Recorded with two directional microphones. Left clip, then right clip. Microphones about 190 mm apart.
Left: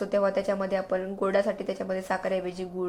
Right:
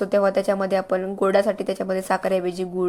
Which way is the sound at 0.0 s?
35° right (ahead or behind).